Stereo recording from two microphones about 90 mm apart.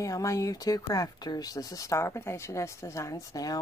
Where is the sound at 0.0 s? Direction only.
35° left (ahead or behind).